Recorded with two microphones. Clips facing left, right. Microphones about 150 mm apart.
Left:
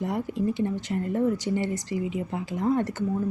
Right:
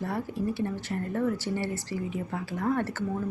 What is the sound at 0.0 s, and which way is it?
Speech, 20° left (ahead or behind).